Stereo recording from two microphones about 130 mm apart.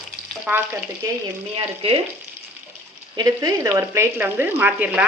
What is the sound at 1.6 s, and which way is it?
Frying, 45° right (ahead or behind).